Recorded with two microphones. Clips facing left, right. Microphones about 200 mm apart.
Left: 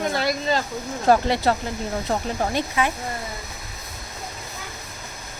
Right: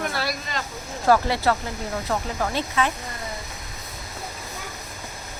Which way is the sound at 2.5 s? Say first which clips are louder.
Even; 15° left (ahead or behind).